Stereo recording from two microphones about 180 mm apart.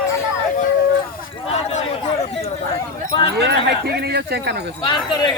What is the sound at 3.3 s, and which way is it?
Speech, 70° right (ahead or behind).